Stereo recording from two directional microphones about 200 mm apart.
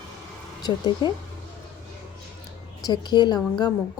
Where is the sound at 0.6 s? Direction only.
20° left (ahead or behind).